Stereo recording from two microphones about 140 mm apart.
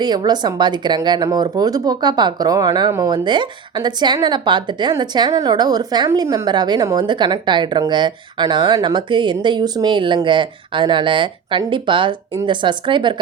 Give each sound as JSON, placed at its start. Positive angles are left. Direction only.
{"t": 0.0, "sound": "speech", "side_deg": -30}